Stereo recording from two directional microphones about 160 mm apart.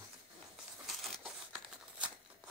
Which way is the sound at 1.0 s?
Centre (ahead or behind).